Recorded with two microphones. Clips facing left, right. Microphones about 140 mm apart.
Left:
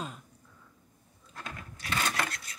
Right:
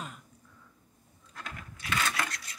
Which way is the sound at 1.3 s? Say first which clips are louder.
Left 1 dB; 30° left (ahead or behind).